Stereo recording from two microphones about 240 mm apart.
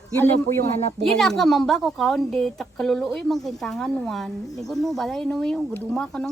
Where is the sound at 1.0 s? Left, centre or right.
Centre.